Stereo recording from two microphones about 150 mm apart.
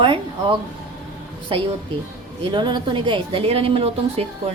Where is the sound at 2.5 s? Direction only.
30° right (ahead or behind).